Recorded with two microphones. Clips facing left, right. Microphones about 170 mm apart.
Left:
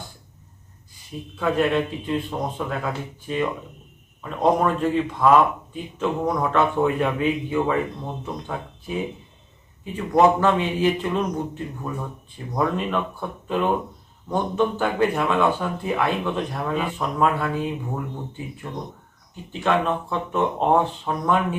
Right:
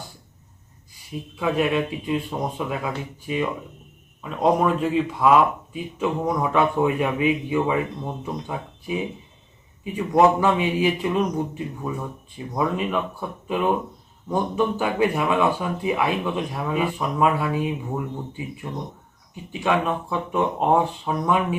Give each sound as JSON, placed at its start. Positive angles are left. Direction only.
{"t": 1.4, "sound": "speech", "side_deg": -10}